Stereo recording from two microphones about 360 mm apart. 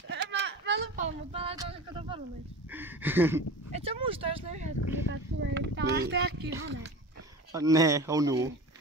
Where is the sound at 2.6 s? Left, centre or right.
Centre.